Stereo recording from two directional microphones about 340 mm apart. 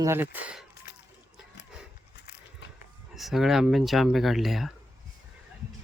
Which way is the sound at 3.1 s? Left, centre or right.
Centre.